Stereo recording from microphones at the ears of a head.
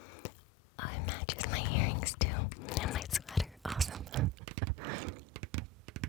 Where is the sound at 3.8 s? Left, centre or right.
Right.